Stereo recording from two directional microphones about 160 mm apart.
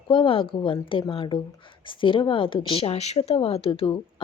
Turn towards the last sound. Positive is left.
turn(degrees=35)  # may be behind; listen again after turning